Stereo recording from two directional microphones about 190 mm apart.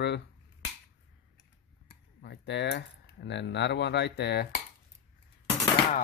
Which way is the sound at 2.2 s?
65° left (ahead or behind).